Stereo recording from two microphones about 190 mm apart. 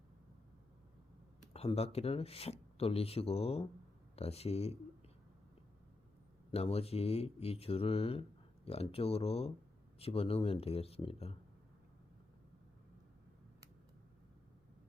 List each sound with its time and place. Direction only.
1.5 s speech: 30° left (ahead or behind)
6.5 s speech: 30° left (ahead or behind)